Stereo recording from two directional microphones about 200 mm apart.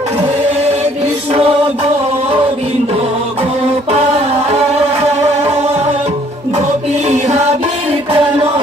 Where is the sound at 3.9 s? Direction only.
30° right (ahead or behind).